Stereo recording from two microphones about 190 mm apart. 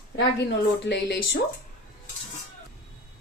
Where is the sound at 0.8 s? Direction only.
65° left (ahead or behind).